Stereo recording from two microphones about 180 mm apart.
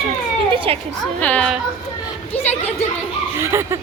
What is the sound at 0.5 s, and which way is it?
Speech, 30° right (ahead or behind).